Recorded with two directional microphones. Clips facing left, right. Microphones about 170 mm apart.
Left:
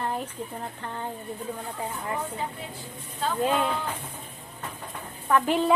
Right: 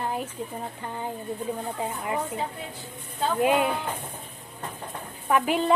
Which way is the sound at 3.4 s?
15° right (ahead or behind).